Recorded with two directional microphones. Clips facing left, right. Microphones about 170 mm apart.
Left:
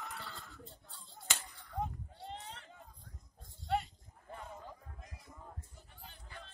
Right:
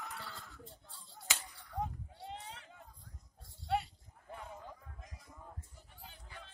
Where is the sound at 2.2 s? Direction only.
5° right (ahead or behind).